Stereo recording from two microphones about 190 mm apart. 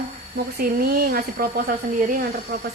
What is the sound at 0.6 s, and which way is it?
Speech, 50° right (ahead or behind).